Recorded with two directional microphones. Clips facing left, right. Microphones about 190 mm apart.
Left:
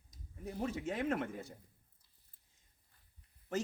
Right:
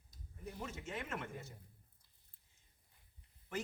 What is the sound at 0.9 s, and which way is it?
Speech, 45° left (ahead or behind).